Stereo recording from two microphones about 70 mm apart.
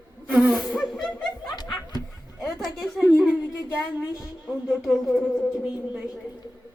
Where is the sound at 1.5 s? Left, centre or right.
Left.